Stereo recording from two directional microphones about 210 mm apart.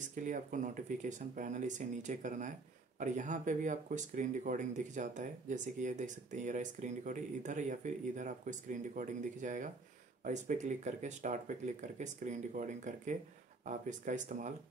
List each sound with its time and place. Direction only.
0.0 s speech: 35° right (ahead or behind)